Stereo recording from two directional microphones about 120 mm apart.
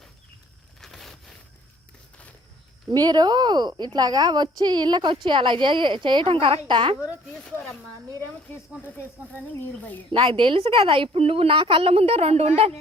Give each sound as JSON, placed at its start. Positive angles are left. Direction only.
{"t": 0.8, "sound": "a sound", "side_deg": 0}
{"t": 2.9, "sound": "a woman's voice", "side_deg": -35}
{"t": 7.3, "sound": "speech", "side_deg": 5}
{"t": 10.1, "sound": "a woman's voice", "side_deg": -45}